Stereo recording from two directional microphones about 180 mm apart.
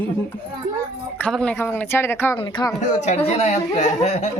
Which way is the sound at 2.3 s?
25° left (ahead or behind).